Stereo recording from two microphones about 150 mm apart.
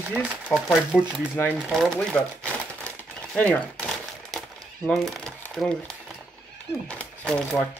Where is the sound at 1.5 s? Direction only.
5° right (ahead or behind).